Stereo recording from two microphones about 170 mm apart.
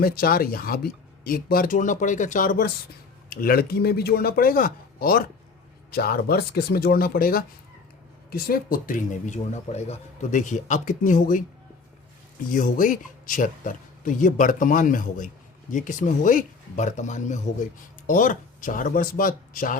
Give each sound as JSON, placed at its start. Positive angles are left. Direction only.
{"t": 0.0, "sound": "speech", "side_deg": 60}
{"t": 12.5, "sound": "speech", "side_deg": 50}